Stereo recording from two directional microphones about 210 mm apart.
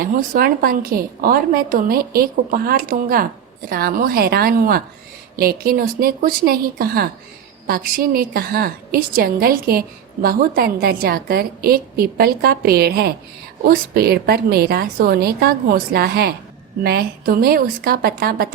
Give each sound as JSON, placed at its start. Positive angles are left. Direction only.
{"t": 0.0, "sound": "a woman's voice", "side_deg": -45}